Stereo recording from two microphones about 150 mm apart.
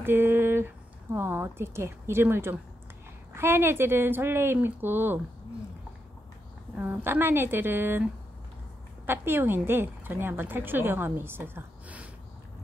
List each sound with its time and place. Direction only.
0.0 s speech: 15° right (ahead or behind)
6.8 s speech: 10° right (ahead or behind)